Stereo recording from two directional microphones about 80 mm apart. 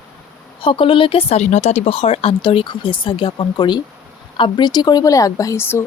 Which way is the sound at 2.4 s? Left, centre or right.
Left.